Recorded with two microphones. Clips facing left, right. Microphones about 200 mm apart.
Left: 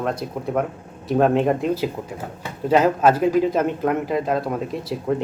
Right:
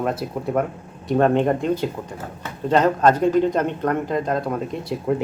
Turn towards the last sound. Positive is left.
turn(degrees=0)  # may be behind; listen again after turning